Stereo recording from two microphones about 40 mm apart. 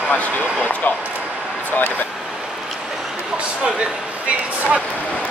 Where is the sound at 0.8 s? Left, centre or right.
Left.